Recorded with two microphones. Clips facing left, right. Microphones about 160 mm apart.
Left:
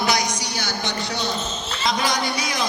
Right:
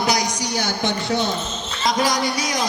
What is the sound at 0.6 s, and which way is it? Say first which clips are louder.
A man's voice: right 5 dB; 50° right (ahead or behind).